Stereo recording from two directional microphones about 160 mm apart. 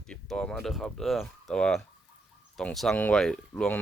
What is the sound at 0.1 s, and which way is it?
Speech, 5° left (ahead or behind).